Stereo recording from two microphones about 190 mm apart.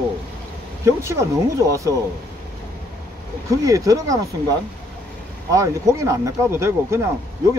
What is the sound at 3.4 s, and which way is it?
Speech, 15° right (ahead or behind).